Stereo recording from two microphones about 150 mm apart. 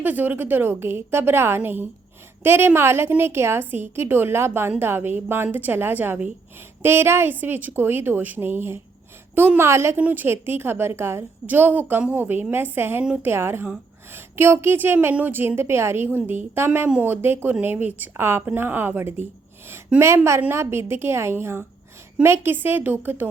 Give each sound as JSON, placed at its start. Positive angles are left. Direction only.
{"t": 0.0, "sound": "a woman's voice", "side_deg": -10}